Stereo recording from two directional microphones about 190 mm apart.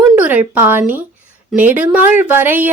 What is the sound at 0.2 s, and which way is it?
Speech, 10° right (ahead or behind).